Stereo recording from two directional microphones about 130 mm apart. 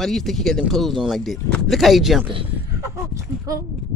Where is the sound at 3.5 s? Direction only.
25° right (ahead or behind).